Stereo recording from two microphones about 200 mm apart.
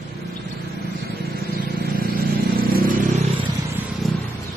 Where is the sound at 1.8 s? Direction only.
50° right (ahead or behind).